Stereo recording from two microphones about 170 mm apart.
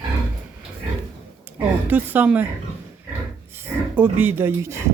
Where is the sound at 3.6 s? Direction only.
10° right (ahead or behind).